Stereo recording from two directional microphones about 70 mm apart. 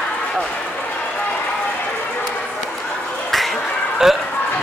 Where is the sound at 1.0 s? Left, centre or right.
Centre.